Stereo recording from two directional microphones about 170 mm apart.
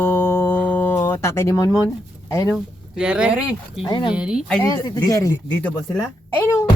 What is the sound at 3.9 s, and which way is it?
Speech, 30° left (ahead or behind).